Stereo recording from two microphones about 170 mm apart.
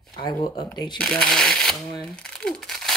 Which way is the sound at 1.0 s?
5° left (ahead or behind).